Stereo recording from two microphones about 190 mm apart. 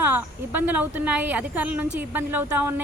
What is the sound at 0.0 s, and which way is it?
A woman's voice, 10° right (ahead or behind).